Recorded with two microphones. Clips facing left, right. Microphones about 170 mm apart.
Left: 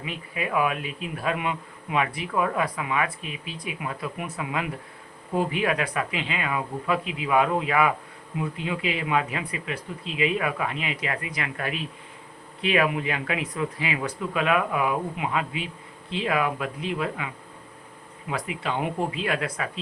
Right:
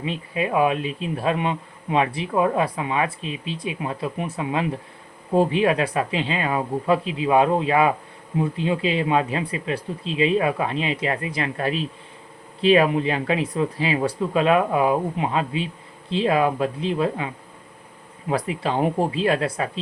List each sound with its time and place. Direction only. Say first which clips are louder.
0.0 s speech: right 6 dB; 30° right (ahead or behind)